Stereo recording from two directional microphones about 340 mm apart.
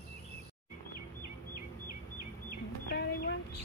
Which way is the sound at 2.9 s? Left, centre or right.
Left.